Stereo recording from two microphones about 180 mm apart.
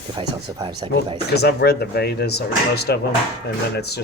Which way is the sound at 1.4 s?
65° left (ahead or behind).